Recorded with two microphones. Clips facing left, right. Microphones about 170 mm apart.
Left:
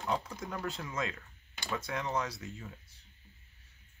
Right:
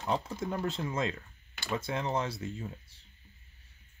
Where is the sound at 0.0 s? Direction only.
25° right (ahead or behind).